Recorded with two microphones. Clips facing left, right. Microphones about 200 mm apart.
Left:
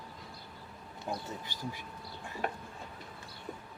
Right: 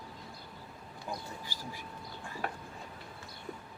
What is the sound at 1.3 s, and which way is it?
Speech, 20° left (ahead or behind).